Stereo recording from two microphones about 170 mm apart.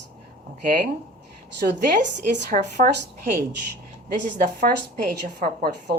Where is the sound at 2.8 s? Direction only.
55° right (ahead or behind).